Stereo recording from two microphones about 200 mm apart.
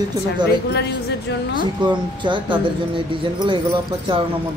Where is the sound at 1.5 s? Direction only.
25° right (ahead or behind).